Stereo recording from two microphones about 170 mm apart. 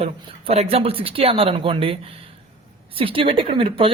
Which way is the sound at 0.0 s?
35° right (ahead or behind).